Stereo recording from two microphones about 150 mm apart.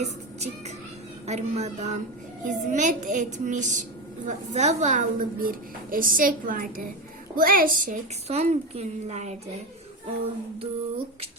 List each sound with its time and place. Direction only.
0.0 s music: 45° right (ahead or behind)
1.3 s a woman's voice: 50° right (ahead or behind); by 8.0 s 70° right (ahead or behind)
8.3 s a woman's voice: 45° right (ahead or behind)
10.6 s a sound: 40° right (ahead or behind)